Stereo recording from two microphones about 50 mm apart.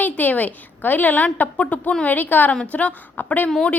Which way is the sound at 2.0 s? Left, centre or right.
Left.